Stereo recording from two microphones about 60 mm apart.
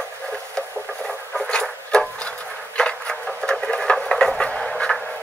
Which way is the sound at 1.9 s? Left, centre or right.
Centre.